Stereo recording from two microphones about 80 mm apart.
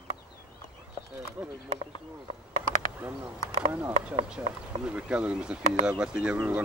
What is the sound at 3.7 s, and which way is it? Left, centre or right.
Speech, right.